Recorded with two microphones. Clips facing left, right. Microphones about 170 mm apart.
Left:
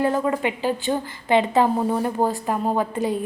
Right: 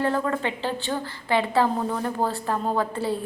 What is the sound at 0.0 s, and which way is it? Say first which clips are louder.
A woman's voice: left 3 dB; 15° left (ahead or behind).